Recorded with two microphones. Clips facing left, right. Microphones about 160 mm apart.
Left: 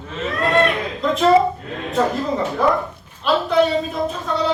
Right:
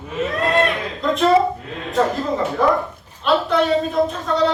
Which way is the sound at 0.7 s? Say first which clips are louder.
Left 1 dB; centre (ahead or behind).